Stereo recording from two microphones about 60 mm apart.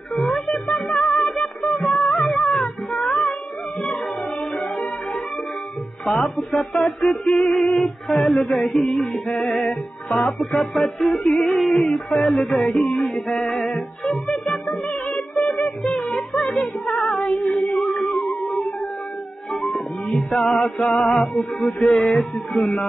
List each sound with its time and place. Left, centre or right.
0.1 s music: centre
6.0 s music: centre
16.9 s female singing: centre
18.3 s music: centre
20.9 s music: left
21.2 s music: centre